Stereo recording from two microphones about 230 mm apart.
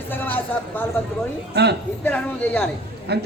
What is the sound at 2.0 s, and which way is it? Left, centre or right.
Speech, centre.